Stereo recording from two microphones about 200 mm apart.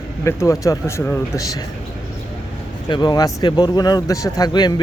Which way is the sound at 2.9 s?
20° left (ahead or behind).